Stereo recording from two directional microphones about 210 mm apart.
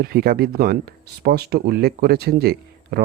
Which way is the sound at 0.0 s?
45° right (ahead or behind).